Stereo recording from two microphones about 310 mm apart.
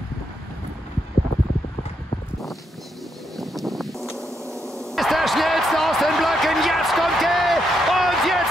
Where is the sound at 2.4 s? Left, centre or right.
Centre.